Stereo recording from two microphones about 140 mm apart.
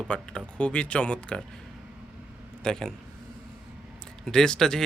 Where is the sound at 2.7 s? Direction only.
5° left (ahead or behind).